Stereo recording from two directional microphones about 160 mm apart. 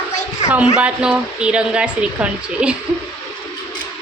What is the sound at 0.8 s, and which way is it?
A woman's voice, 10° right (ahead or behind).